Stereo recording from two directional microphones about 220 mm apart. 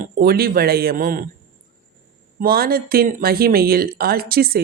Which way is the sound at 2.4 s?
40° right (ahead or behind).